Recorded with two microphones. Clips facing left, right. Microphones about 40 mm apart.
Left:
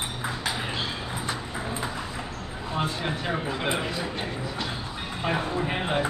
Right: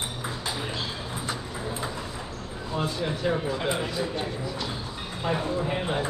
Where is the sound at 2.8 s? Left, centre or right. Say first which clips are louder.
Even; left.